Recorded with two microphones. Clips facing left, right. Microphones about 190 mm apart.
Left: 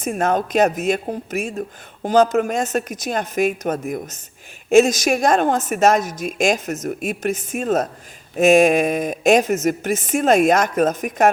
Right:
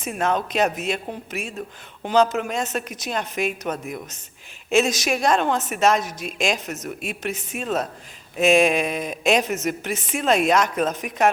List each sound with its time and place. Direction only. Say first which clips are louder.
0.0 s a woman's voice: left 4 dB; 45° left (ahead or behind)